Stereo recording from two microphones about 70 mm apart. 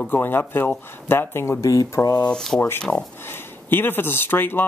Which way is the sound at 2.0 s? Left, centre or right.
Left.